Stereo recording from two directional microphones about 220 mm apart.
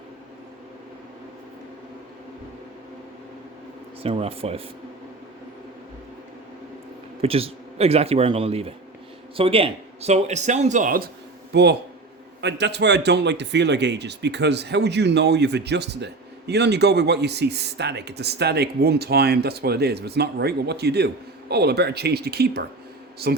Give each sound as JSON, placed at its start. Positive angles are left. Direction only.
{"t": 4.0, "sound": "speech", "side_deg": -25}
{"t": 7.2, "sound": "a man's voice", "side_deg": -25}